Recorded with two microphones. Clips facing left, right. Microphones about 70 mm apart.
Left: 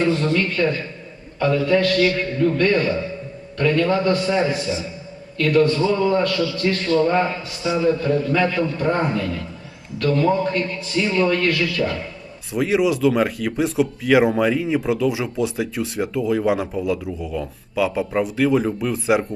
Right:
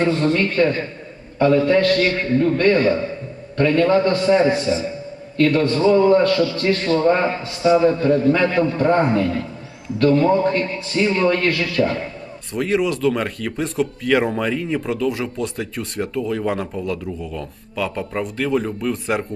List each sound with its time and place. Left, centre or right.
0.0 s a man's voice: right
12.5 s speech: centre